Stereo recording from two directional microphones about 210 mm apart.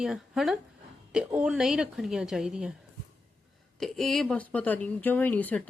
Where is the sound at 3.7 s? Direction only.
Centre (ahead or behind).